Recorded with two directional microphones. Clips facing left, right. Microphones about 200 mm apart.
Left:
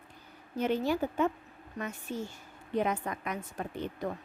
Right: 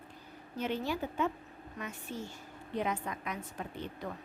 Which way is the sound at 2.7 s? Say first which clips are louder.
Left 4 dB; 50° left (ahead or behind).